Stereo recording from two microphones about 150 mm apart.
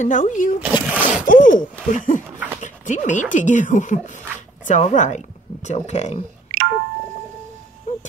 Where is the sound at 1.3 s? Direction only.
60° left (ahead or behind).